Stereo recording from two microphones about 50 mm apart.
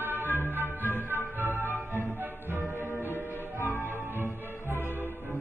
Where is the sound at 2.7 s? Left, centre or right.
Left.